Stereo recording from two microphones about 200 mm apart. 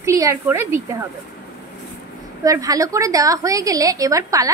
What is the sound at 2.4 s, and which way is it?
A woman's voice, 15° right (ahead or behind).